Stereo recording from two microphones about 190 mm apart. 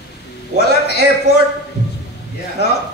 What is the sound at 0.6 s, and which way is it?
Speech, 60° left (ahead or behind).